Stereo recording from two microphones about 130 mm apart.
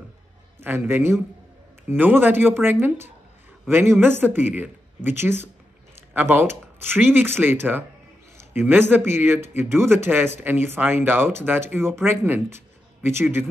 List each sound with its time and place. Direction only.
0.6 s speech: 20° right (ahead or behind)